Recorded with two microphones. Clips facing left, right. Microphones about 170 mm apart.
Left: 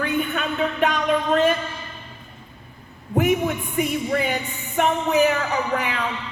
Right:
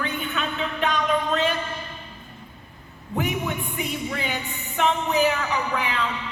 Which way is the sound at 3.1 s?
50° left (ahead or behind).